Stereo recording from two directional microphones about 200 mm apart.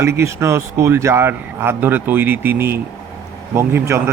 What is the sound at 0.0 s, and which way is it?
Speech, 15° right (ahead or behind).